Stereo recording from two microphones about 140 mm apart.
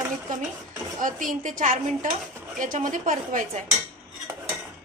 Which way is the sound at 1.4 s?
70° right (ahead or behind).